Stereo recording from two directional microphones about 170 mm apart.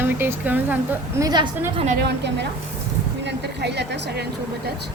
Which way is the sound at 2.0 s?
90° right.